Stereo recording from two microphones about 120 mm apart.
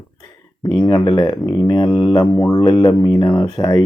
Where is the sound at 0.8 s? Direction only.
35° left (ahead or behind).